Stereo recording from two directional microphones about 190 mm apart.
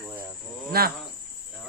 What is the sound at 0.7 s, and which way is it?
Speech, 55° right (ahead or behind).